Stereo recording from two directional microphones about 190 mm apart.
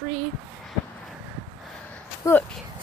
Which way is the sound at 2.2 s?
15° left (ahead or behind).